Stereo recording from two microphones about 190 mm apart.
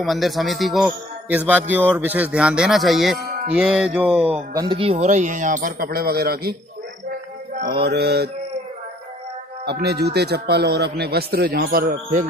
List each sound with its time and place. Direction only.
0.0 s a man's voice: centre (ahead or behind)
4.6 s a man's voice: 25° right (ahead or behind); by 6.5 s 55° right (ahead or behind)
7.5 s speech: 55° right (ahead or behind)
9.7 s speech: 60° right (ahead or behind)